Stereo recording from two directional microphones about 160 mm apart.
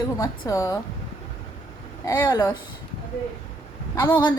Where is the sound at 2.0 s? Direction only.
25° left (ahead or behind).